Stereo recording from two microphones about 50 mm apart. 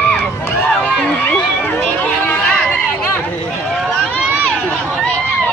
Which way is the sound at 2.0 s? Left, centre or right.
Left.